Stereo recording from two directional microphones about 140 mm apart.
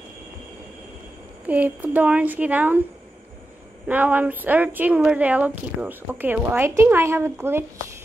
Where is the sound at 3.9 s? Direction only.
10° right (ahead or behind).